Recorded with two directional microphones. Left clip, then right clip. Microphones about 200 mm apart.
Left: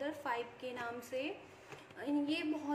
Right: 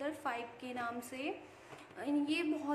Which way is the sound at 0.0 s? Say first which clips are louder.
Even; 15° right (ahead or behind).